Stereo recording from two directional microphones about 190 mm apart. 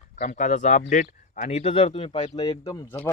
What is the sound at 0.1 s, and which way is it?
Speech, 40° left (ahead or behind).